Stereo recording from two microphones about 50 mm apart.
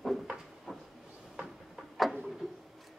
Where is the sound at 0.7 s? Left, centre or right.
Centre.